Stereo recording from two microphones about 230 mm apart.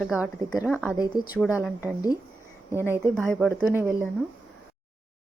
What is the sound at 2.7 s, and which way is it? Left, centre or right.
Speech, centre.